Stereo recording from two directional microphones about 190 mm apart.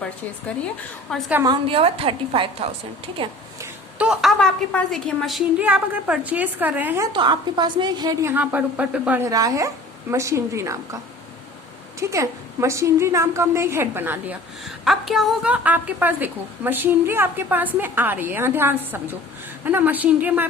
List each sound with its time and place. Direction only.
1.1 s a woman's voice: 5° left (ahead or behind)
1.5 s a woman's voice: 30° right (ahead or behind)
3.6 s a woman's voice: 5° right (ahead or behind)